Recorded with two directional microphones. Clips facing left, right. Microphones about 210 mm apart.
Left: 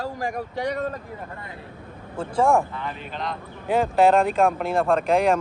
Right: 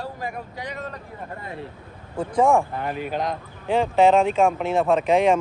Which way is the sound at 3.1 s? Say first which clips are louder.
Right 5 dB; 45° right (ahead or behind).